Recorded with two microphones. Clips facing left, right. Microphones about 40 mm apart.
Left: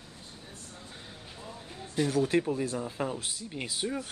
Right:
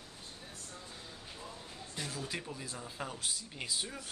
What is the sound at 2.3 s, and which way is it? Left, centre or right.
Speech, left.